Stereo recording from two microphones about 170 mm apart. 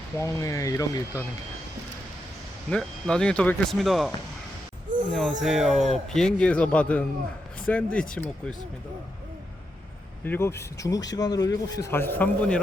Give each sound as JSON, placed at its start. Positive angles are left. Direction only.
{"t": 0.2, "sound": "speech", "side_deg": 15}
{"t": 2.6, "sound": "speech", "side_deg": 5}
{"t": 5.1, "sound": "a man's voice", "side_deg": 0}
{"t": 10.2, "sound": "a man's voice", "side_deg": 15}